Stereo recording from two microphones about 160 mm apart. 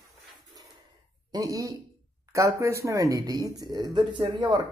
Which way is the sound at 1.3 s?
20° right (ahead or behind).